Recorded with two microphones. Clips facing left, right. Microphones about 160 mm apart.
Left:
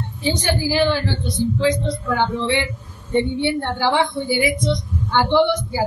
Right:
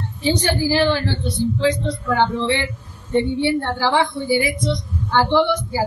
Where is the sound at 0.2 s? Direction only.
15° left (ahead or behind).